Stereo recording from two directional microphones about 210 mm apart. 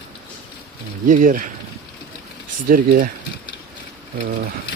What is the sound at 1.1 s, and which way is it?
Speech, 40° right (ahead or behind).